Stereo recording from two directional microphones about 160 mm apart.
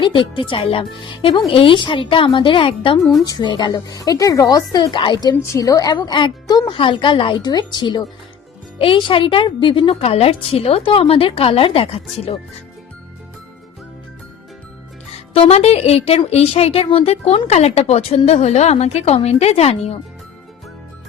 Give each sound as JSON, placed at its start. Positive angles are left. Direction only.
{"t": 0.0, "sound": "a woman's voice", "side_deg": 30}
{"t": 3.0, "sound": "speech", "side_deg": 0}
{"t": 3.2, "sound": "a woman's voice", "side_deg": 25}
{"t": 15.3, "sound": "a woman's voice", "side_deg": 40}